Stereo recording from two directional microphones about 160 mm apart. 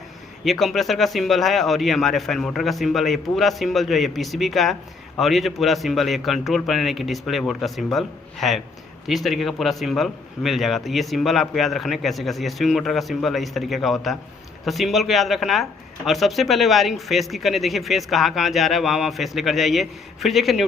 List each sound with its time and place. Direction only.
0.4 s speech: centre (ahead or behind)